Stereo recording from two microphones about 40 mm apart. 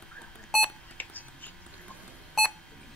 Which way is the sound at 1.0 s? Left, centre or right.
Left.